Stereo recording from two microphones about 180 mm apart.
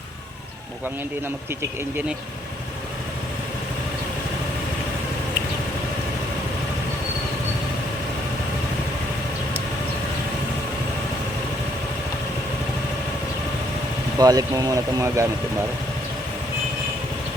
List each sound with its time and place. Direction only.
14.2 s speech: 20° right (ahead or behind)